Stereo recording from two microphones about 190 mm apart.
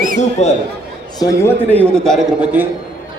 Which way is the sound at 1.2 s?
10° left (ahead or behind).